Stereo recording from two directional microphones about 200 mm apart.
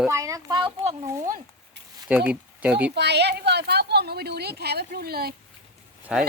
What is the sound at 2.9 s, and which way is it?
Speech, 55° right (ahead or behind).